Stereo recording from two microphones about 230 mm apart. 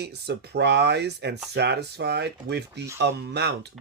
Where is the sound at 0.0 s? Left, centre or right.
Right.